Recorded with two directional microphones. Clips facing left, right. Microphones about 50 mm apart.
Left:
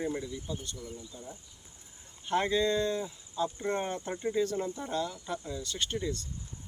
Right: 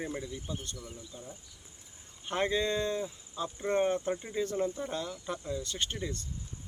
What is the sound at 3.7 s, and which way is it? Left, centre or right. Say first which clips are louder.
Speech: right 8 dB; centre.